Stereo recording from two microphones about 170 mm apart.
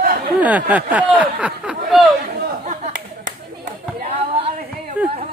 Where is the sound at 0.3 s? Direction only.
10° right (ahead or behind).